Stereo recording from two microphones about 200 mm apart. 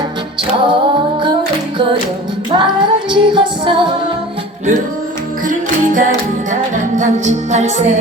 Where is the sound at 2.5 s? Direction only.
25° right (ahead or behind).